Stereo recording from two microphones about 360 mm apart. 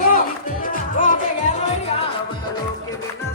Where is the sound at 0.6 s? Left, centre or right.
Left.